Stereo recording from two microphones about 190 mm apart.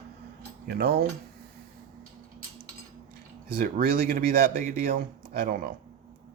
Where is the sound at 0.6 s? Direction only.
55° right (ahead or behind).